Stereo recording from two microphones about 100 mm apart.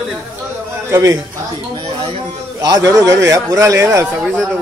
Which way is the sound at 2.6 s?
35° right (ahead or behind).